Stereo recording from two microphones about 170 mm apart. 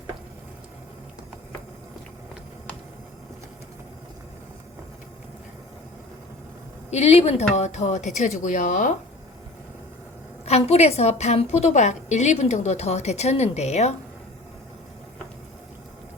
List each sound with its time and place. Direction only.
6.9 s a woman's voice: 40° left (ahead or behind)
10.4 s a woman's voice: 40° left (ahead or behind)